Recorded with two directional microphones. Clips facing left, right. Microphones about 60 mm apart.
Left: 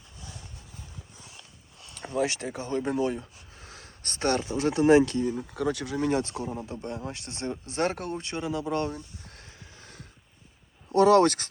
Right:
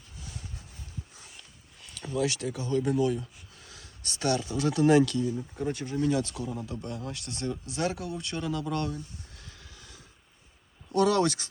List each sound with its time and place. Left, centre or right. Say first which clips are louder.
2.0 s speech: left 1 dB; left
5.4 s speech: left 3 dB; left
6.1 s speech: left 2 dB; left
8.2 s speech: left 1 dB; left
9.2 s a sound: left 3 dB; left
9.5 s hum: left 1 dB; left
10.9 s speech: left 5 dB; left